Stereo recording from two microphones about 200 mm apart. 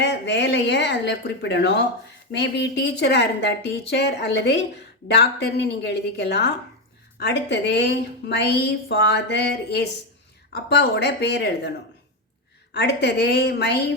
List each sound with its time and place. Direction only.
0.0 s a woman's voice: 55° left (ahead or behind)
12.7 s a woman's voice: 55° left (ahead or behind)